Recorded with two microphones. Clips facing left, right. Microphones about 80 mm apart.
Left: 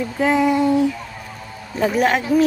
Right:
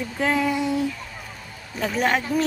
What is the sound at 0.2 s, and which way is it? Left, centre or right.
Speech, centre.